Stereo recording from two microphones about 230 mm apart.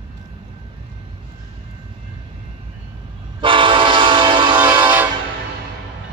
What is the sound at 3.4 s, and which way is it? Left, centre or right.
Train, right.